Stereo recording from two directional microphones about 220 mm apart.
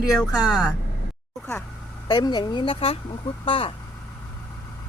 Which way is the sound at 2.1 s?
20° left (ahead or behind).